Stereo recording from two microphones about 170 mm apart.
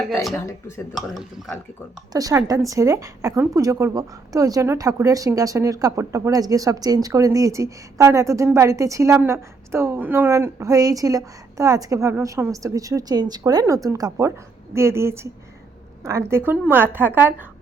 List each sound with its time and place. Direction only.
0.9 s speech: centre (ahead or behind)
2.1 s a woman's voice: 20° right (ahead or behind)